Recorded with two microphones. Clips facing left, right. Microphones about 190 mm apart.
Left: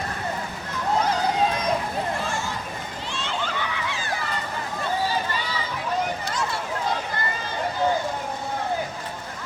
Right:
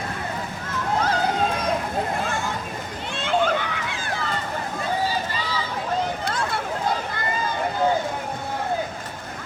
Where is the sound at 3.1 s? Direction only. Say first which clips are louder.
Right 9 dB; 55° right (ahead or behind).